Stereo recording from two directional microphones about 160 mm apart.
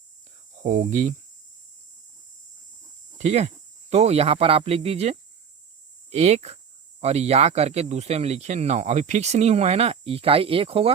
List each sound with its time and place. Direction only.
0.6 s speech: 50° right (ahead or behind)
3.2 s speech: 45° right (ahead or behind)